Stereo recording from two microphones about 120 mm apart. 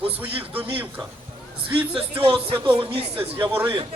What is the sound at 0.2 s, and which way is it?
Speech, 15° right (ahead or behind).